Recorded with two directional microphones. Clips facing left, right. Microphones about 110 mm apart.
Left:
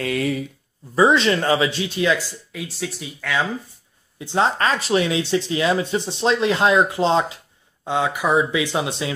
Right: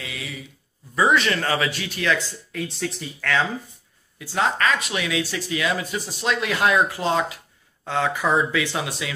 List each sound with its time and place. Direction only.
0.0 s speech: 50° left (ahead or behind)
0.9 s speech: 25° left (ahead or behind)
2.5 s speech: 5° left (ahead or behind)
4.2 s speech: 25° left (ahead or behind)